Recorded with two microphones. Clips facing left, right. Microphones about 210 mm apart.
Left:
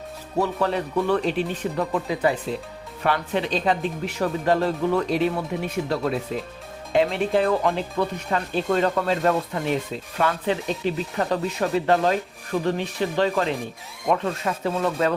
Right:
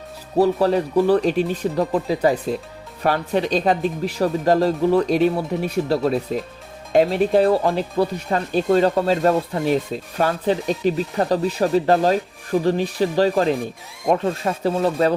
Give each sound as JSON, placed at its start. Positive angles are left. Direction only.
{"t": 0.3, "sound": "speech", "side_deg": -35}